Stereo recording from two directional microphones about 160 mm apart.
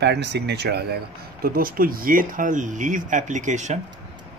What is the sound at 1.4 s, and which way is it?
Speech, 65° right (ahead or behind).